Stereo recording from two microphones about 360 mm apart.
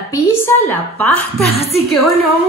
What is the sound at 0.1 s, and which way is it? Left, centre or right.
A man's voice, centre.